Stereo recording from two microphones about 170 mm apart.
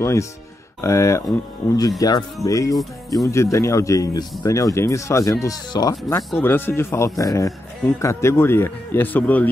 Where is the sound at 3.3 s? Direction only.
15° left (ahead or behind).